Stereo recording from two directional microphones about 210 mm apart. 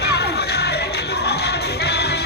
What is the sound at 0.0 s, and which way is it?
Music, 50° left (ahead or behind).